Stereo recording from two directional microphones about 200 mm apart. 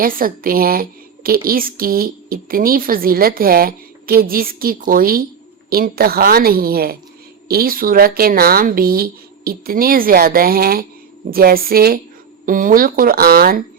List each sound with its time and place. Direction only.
0.0 s speech: 45° right (ahead or behind)